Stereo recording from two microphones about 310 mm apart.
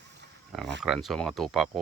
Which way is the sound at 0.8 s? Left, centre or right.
Centre.